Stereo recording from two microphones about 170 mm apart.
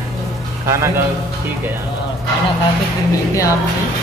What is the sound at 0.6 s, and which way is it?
Speech, 15° right (ahead or behind).